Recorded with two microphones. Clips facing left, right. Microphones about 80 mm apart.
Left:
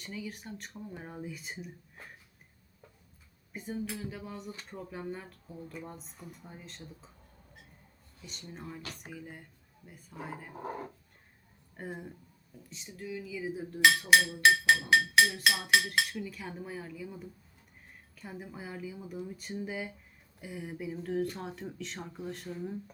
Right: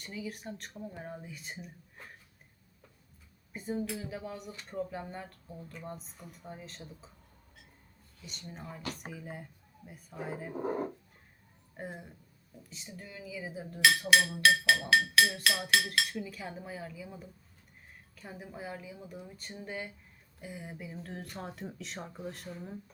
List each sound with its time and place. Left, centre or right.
0.0 s speech: centre
3.5 s speech: centre
8.2 s speech: centre
10.6 s speech: right
11.8 s speech: centre
14.8 s speech: centre
15.2 s speech: centre